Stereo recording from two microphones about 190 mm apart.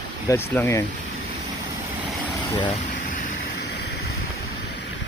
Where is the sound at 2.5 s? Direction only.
25° left (ahead or behind).